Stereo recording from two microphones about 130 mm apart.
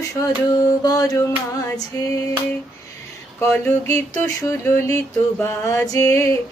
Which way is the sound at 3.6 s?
20° left (ahead or behind).